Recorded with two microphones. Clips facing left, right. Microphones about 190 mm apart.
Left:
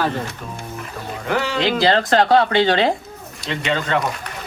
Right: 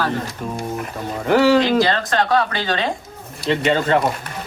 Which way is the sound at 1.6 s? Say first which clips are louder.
Even; 30° left (ahead or behind).